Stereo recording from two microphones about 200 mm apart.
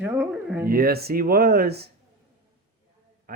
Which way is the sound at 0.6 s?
50° right (ahead or behind).